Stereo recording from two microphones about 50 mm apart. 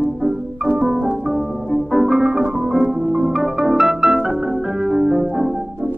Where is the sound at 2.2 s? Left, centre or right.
Centre.